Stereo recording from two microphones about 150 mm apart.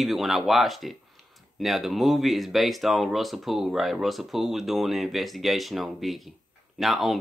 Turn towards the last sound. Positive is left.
turn(degrees=0)  # may be behind; listen again after turning